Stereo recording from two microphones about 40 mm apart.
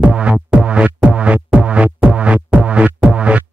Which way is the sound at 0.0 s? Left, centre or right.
Right.